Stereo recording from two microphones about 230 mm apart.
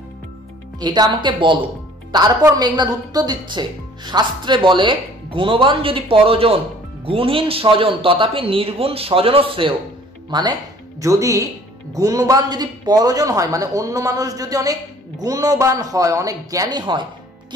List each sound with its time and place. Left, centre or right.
0.7 s a woman's voice: centre